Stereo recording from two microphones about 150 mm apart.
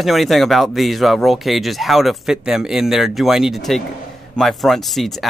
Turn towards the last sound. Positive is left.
turn(degrees=0)  # may be behind; listen again after turning